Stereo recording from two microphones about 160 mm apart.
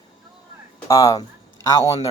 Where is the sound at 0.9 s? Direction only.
20° left (ahead or behind).